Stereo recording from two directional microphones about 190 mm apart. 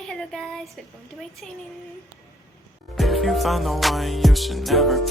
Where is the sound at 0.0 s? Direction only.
5° left (ahead or behind).